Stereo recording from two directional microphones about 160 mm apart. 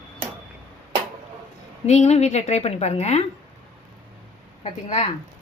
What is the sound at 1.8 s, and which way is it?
A woman's voice, 45° left (ahead or behind).